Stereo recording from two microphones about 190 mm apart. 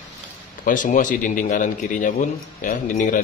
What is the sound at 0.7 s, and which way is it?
A man's voice, 45° left (ahead or behind).